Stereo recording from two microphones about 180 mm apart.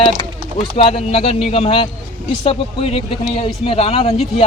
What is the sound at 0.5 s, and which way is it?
Speech, 35° left (ahead or behind).